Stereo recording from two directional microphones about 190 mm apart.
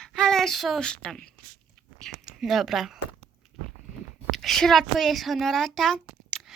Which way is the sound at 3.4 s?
5° right (ahead or behind).